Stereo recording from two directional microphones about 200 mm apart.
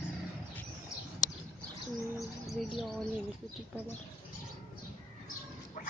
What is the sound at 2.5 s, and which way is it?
Speech, centre (ahead or behind).